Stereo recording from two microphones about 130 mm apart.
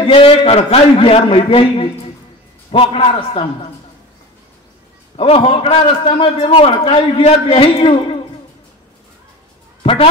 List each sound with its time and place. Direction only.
0.0 s a man's voice: 45° left (ahead or behind)
5.1 s a man's voice: 50° left (ahead or behind)